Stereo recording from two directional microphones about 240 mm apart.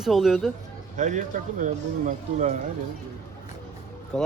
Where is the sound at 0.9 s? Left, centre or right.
Right.